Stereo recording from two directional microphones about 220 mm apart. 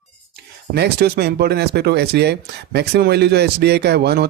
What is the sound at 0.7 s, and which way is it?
Speech, 45° right (ahead or behind).